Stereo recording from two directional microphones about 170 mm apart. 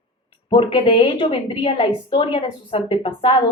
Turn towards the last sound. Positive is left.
turn(degrees=30)  # may be behind; listen again after turning